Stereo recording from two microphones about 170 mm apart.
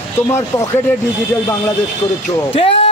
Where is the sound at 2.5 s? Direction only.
35° left (ahead or behind).